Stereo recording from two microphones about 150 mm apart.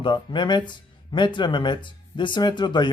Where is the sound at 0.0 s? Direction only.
30° left (ahead or behind).